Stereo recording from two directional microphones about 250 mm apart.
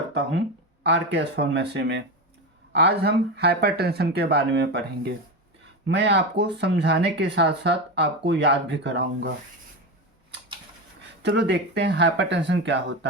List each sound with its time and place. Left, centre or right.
0.1 s speech: right
11.2 s speech: right